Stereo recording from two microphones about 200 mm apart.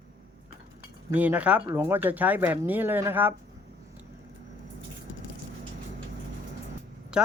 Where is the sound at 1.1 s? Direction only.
5° right (ahead or behind).